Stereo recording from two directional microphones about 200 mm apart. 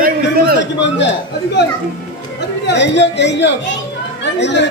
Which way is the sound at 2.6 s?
60° left (ahead or behind).